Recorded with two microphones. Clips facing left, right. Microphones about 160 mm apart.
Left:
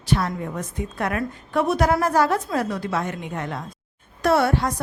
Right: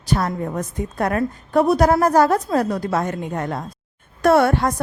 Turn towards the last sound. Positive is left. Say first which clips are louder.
# right 4 dB
turn(degrees=-55)  # may be behind; listen again after turning